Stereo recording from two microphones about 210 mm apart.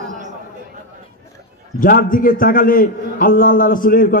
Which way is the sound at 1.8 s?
40° left (ahead or behind).